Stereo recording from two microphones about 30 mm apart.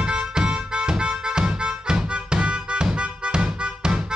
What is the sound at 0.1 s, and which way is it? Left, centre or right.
Music, right.